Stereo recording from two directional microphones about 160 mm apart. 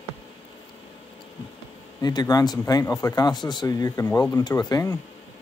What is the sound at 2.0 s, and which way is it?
Speech, 25° left (ahead or behind).